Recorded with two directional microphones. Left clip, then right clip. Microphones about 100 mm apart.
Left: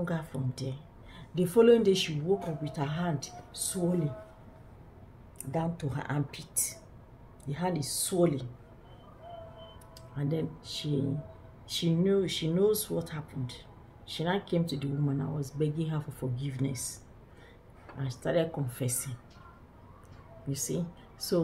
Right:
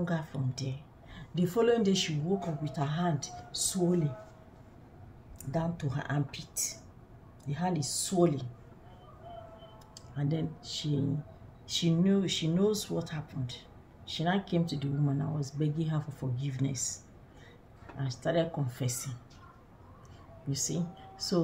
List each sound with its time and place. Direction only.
0.0 s speech: 20° left (ahead or behind)
5.4 s a woman's voice: 35° left (ahead or behind)
10.1 s speech: 15° left (ahead or behind)
18.0 s speech: 15° left (ahead or behind)
20.4 s speech: 15° left (ahead or behind)